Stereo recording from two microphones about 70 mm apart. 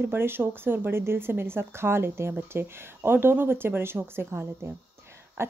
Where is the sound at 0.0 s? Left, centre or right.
Right.